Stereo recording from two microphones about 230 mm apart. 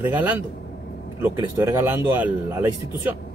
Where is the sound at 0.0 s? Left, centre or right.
Centre.